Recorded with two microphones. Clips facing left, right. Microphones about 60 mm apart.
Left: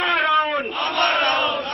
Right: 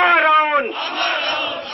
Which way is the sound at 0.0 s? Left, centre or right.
Right.